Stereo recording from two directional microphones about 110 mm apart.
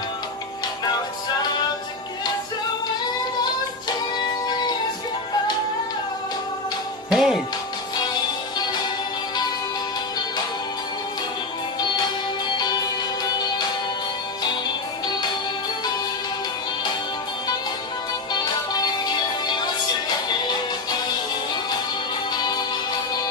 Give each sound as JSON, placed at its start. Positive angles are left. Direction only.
{"t": 7.1, "sound": "music", "side_deg": -5}
{"t": 11.8, "sound": "music", "side_deg": 40}
{"t": 13.2, "sound": "music", "side_deg": 40}
{"t": 18.3, "sound": "music", "side_deg": 40}
{"t": 22.3, "sound": "music", "side_deg": 40}